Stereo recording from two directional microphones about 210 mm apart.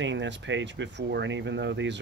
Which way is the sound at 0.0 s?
60° right (ahead or behind).